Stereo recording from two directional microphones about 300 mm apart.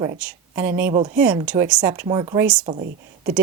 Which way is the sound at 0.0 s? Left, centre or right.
Centre.